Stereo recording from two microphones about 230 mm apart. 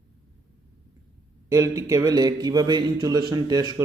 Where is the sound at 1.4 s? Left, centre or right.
Centre.